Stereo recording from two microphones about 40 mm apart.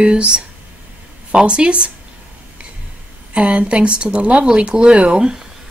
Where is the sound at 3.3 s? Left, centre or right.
Right.